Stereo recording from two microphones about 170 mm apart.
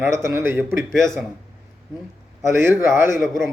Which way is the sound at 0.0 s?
15° right (ahead or behind).